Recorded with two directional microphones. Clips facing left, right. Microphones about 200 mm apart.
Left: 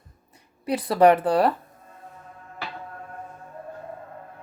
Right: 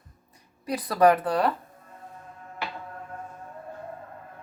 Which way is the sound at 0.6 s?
25° left (ahead or behind).